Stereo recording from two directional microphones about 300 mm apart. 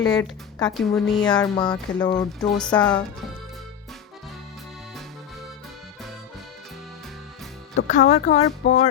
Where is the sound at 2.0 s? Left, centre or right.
Centre.